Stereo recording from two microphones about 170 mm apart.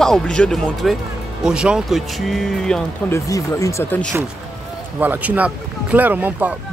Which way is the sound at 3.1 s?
20° left (ahead or behind).